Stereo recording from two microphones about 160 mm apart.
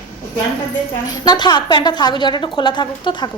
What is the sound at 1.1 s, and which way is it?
A woman's voice, 25° left (ahead or behind).